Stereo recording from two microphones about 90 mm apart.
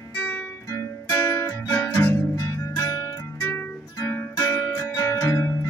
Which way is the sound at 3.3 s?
20° left (ahead or behind).